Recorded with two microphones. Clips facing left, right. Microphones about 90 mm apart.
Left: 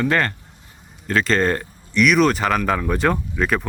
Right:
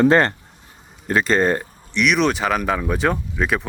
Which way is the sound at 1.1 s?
15° right (ahead or behind).